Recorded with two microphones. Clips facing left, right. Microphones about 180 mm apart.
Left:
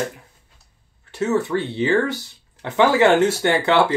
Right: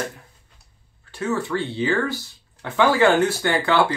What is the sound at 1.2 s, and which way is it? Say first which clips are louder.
Speech: left 4 dB; 20° left (ahead or behind).